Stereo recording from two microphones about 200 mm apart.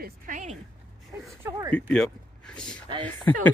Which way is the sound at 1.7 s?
5° left (ahead or behind).